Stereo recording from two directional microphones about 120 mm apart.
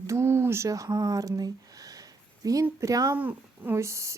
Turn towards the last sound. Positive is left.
turn(degrees=-25)  # may be behind; listen again after turning